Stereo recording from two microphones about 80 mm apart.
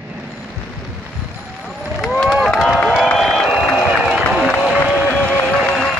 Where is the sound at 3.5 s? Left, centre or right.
Centre.